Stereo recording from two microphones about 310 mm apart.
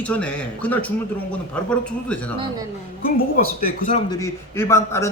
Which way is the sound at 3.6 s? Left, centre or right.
Left.